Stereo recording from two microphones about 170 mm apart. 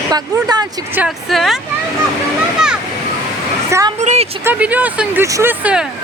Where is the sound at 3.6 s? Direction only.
15° right (ahead or behind).